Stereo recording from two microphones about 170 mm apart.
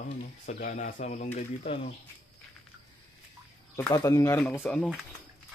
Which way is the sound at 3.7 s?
20° left (ahead or behind).